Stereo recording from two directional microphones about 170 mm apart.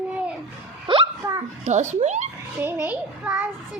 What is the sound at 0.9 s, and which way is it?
Hiccup, 30° right (ahead or behind).